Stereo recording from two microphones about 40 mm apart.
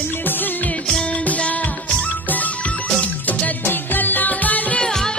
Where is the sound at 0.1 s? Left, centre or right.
Left.